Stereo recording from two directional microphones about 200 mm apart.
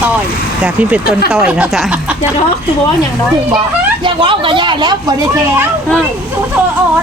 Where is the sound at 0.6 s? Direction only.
5° right (ahead or behind).